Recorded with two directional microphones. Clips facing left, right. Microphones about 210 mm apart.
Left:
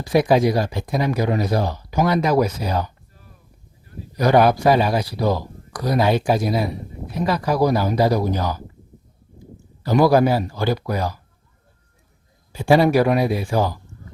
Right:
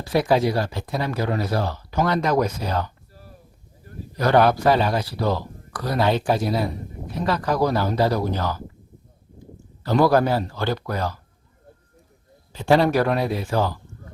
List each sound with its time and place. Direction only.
0.0 s speech: 15° left (ahead or behind)
3.9 s a sound: 45° right (ahead or behind)
4.2 s speech: 10° left (ahead or behind)
9.8 s speech: 10° left (ahead or behind)
12.5 s speech: 10° left (ahead or behind)